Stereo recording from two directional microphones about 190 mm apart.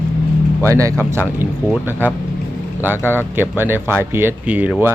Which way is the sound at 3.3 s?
10° right (ahead or behind).